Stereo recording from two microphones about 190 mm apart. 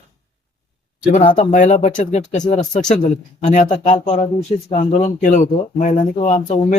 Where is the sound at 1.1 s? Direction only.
40° left (ahead or behind).